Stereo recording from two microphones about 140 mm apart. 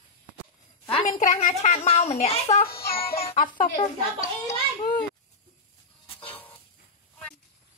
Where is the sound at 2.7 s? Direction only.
90° left.